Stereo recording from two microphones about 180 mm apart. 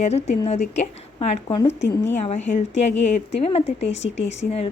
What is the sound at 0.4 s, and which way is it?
A woman's voice, 40° left (ahead or behind).